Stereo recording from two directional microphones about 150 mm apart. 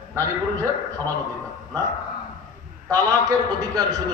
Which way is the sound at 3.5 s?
25° right (ahead or behind).